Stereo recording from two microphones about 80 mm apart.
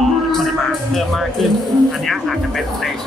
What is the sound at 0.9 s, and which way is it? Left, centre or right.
Speech, centre.